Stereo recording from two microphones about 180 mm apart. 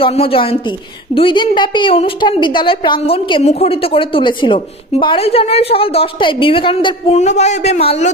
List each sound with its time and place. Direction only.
0.0 s a woman's voice: 30° left (ahead or behind)